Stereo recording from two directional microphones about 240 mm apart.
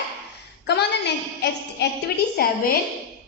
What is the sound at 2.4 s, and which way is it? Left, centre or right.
Speech, left.